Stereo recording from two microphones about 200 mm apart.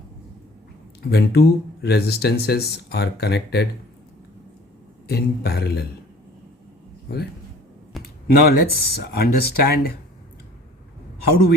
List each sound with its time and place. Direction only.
1.1 s speech: 50° left (ahead or behind)
5.0 s speech: 50° left (ahead or behind)
7.9 s a sound: centre (ahead or behind)
8.3 s speech: 50° left (ahead or behind)